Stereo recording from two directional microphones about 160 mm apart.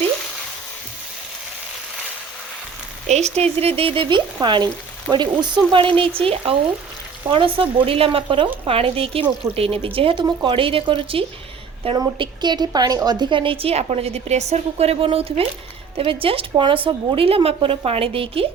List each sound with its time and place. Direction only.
3.1 s a woman's voice: 45° right (ahead or behind)